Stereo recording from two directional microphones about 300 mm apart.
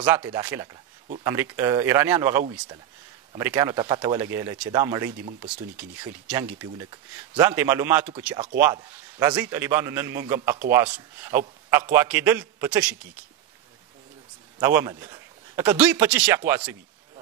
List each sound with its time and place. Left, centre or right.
0.0 s a man's voice: centre
14.6 s a man's voice: centre